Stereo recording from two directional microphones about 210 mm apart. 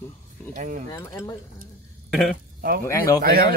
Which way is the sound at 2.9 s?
15° left (ahead or behind).